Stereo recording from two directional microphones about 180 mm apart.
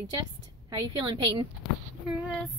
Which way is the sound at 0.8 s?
25° right (ahead or behind).